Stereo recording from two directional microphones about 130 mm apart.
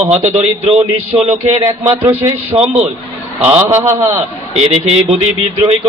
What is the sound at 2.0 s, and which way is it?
A man's voice, 15° right (ahead or behind).